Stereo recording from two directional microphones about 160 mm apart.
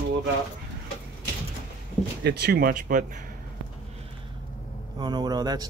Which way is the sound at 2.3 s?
90° right.